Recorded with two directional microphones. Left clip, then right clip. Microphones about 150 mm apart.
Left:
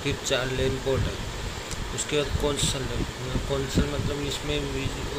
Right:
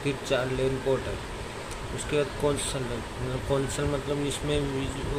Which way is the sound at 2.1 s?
Centre (ahead or behind).